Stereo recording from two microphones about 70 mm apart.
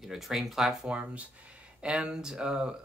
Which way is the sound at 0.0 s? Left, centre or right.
Centre.